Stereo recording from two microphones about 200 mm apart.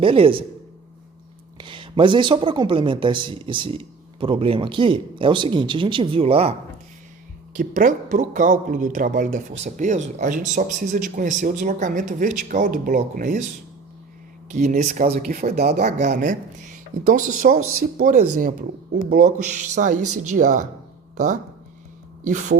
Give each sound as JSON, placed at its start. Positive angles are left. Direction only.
{"t": 0.0, "sound": "speech", "side_deg": -25}
{"t": 1.5, "sound": "speech", "side_deg": -25}
{"t": 7.5, "sound": "speech", "side_deg": -40}
{"t": 14.5, "sound": "speech", "side_deg": -40}
{"t": 15.7, "sound": "speech", "side_deg": -35}
{"t": 17.6, "sound": "speech", "side_deg": -90}
{"t": 17.9, "sound": "speech", "side_deg": -40}
{"t": 22.2, "sound": "speech", "side_deg": -40}